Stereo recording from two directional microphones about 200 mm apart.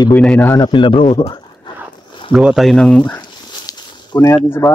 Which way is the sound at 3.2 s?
20° left (ahead or behind).